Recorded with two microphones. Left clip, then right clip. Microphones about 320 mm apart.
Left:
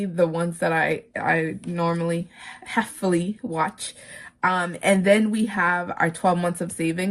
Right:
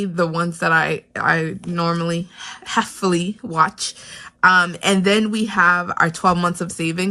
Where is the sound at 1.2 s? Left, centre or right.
Right.